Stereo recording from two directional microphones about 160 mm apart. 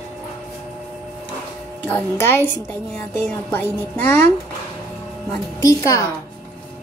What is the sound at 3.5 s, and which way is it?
Speech, 10° left (ahead or behind).